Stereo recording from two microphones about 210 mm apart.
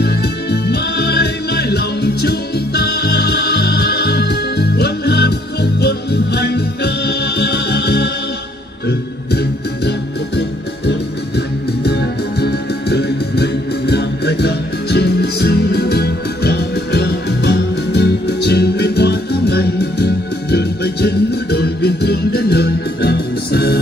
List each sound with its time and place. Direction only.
0.0 s music: 50° left (ahead or behind)
10.9 s music: 50° left (ahead or behind)